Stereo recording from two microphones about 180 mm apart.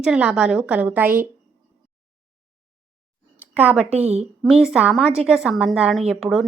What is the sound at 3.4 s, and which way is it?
Speech, 10° right (ahead or behind).